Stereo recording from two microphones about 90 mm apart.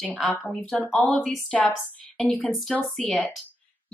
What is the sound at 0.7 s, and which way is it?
Female singing, 20° left (ahead or behind).